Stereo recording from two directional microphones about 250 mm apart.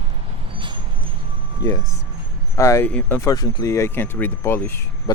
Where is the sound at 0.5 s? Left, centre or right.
Centre.